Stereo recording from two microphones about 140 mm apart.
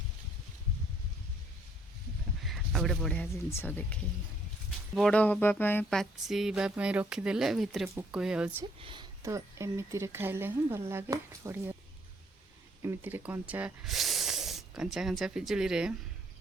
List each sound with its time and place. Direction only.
2.4 s a sound: centre (ahead or behind)
3.3 s speech: 15° left (ahead or behind)
4.9 s speech: 5° left (ahead or behind)
5.9 s speech: centre (ahead or behind)
8.8 s speech: 35° right (ahead or behind)
9.2 s speech: 20° right (ahead or behind)
12.8 s speech: 15° right (ahead or behind)
13.8 s snort: centre (ahead or behind)
14.9 s speech: centre (ahead or behind)